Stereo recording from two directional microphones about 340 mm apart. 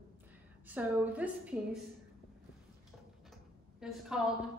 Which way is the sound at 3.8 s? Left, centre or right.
Centre.